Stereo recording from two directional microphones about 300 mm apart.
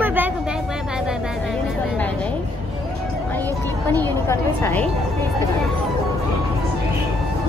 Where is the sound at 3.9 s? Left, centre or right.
Centre.